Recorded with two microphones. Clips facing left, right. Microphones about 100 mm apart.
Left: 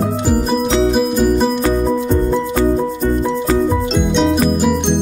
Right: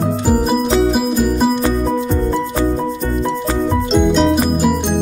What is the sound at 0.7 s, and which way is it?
Music, 5° right (ahead or behind).